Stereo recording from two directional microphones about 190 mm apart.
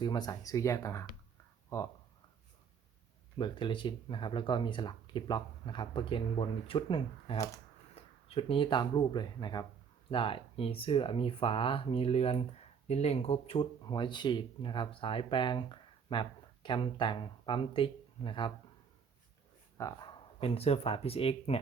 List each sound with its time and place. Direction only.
0.0 s speech: 20° left (ahead or behind)
3.3 s speech: 25° left (ahead or behind)
7.9 s speech: 30° left (ahead or behind)
19.8 s speech: 25° left (ahead or behind)